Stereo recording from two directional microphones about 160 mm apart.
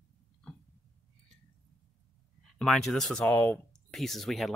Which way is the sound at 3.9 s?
Centre (ahead or behind).